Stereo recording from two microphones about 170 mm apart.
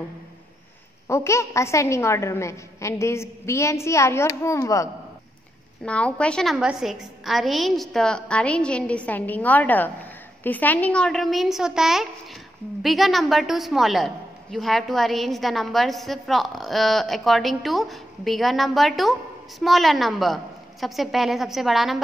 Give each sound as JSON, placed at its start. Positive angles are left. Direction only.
{"t": 1.0, "sound": "a woman's voice", "side_deg": 15}
{"t": 5.9, "sound": "a woman's voice", "side_deg": 5}